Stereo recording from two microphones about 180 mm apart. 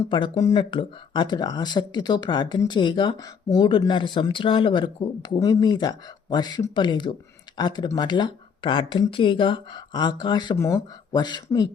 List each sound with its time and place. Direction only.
0.1 s speech: 25° left (ahead or behind)